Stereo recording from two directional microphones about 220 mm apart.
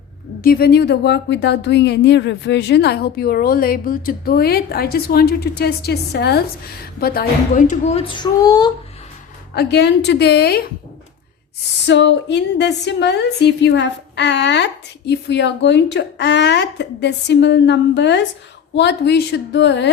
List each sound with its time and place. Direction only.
0.4 s a woman's voice: 45° left (ahead or behind); by 8.7 s 15° left (ahead or behind)
9.6 s a woman's voice: 50° left (ahead or behind)
11.9 s a woman's voice: 55° left (ahead or behind)